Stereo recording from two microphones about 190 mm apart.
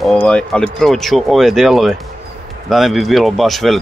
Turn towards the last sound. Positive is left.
turn(degrees=0)  # may be behind; listen again after turning